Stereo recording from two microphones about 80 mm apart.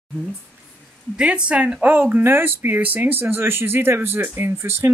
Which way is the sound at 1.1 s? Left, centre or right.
Centre.